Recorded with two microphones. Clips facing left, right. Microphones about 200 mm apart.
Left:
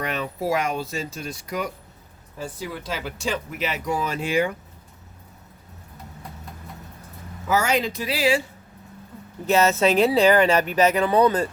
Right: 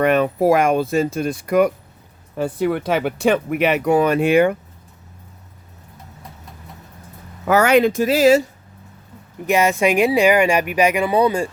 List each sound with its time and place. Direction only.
0.0 s speech: 55° right (ahead or behind)
7.4 s speech: 65° right (ahead or behind); by 8.4 s 45° right (ahead or behind)
9.5 s speech: 15° right (ahead or behind)